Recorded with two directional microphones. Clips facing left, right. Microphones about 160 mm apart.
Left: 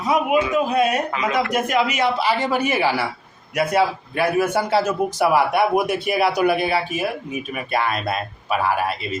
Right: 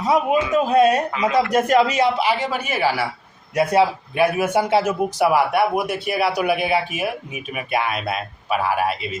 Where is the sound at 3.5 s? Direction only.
25° right (ahead or behind).